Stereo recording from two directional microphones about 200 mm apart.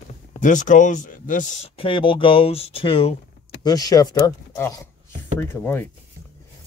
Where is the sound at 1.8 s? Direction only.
25° left (ahead or behind).